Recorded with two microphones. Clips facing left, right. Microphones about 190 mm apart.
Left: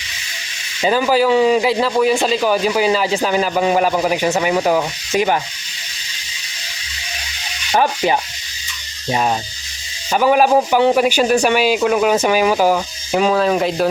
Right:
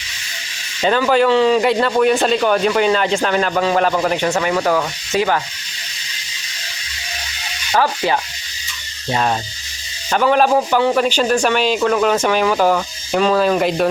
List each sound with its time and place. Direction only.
0.8 s a man's voice: 10° left (ahead or behind)
7.7 s a man's voice: 15° left (ahead or behind); by 13.8 s centre (ahead or behind)